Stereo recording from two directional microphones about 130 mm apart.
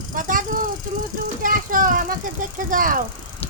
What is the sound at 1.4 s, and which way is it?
Child singing, 90° right.